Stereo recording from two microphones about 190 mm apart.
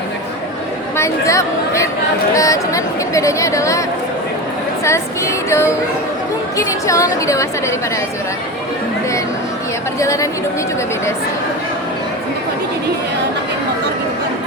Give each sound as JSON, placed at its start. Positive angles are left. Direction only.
{"t": 0.9, "sound": "a woman's voice", "side_deg": 15}
{"t": 10.0, "sound": "a woman's voice", "side_deg": 15}